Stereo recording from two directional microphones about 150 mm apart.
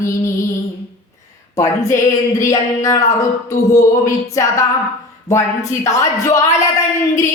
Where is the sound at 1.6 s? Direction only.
20° left (ahead or behind).